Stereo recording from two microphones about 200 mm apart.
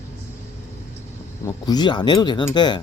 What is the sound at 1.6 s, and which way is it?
Speech, 20° left (ahead or behind).